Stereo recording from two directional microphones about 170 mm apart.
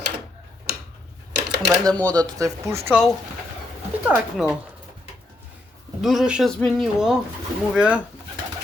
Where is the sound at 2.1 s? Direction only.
20° right (ahead or behind).